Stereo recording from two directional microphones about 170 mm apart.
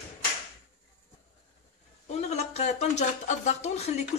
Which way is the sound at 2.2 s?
40° left (ahead or behind).